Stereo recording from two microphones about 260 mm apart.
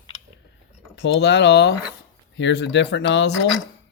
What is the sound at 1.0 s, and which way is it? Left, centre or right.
Speech, left.